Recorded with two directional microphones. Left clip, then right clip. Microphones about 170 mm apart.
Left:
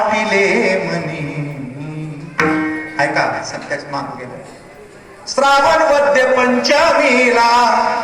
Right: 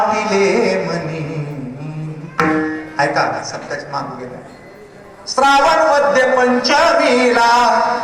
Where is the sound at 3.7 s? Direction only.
15° left (ahead or behind).